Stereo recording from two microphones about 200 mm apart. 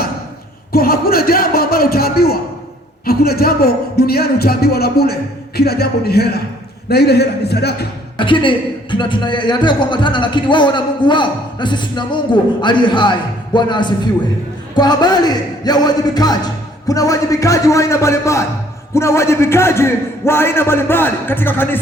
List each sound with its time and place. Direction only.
0.7 s a sound: 50° left (ahead or behind)
3.1 s speech: 50° left (ahead or behind)
8.2 s a man's voice: 25° left (ahead or behind)